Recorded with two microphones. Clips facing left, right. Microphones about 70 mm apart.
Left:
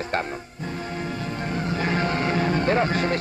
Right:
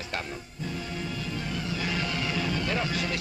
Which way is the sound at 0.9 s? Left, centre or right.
Left.